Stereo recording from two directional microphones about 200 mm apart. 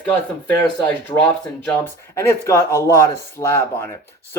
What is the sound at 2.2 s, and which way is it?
Speech, 15° left (ahead or behind).